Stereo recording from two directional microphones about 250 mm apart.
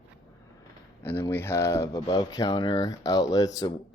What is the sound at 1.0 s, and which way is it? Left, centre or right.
Speech, centre.